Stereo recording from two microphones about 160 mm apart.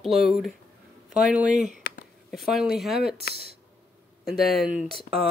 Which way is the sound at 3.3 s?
75° left (ahead or behind).